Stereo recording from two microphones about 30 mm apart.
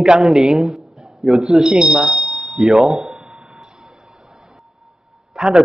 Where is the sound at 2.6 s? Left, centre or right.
Centre.